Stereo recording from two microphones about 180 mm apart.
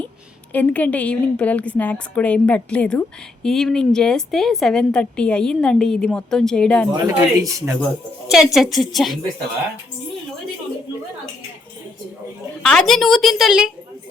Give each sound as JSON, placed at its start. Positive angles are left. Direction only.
{"t": 0.5, "sound": "a woman's voice", "side_deg": 10}
{"t": 6.9, "sound": "speech", "side_deg": -20}
{"t": 8.3, "sound": "a woman's voice", "side_deg": 0}
{"t": 12.6, "sound": "a woman's voice", "side_deg": 5}